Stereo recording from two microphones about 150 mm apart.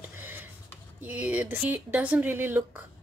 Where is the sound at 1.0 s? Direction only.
10° right (ahead or behind).